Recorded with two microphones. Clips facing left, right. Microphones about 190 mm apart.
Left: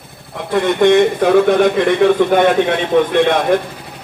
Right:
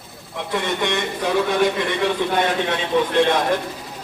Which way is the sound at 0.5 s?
55° left (ahead or behind).